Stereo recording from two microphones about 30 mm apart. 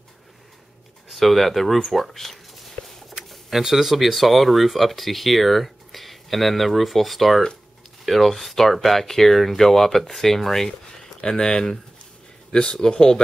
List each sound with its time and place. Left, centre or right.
1.1 s a sound: centre
3.4 s speech: centre
11.1 s speech: left